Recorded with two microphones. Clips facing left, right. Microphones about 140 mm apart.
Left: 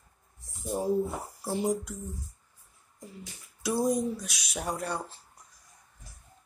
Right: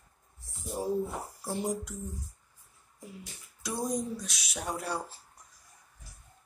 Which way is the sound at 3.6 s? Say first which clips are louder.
Left 6 dB; 5° left (ahead or behind).